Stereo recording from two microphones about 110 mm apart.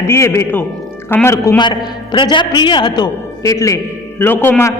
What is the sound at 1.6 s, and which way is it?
A man's voice, 45° left (ahead or behind).